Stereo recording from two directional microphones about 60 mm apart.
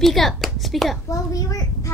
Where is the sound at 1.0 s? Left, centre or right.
Left.